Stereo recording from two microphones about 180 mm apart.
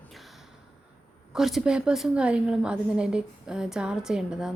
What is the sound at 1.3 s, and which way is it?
Speech, centre (ahead or behind).